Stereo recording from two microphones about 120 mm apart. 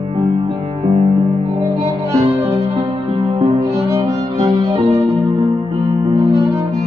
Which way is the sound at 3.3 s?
50° right (ahead or behind).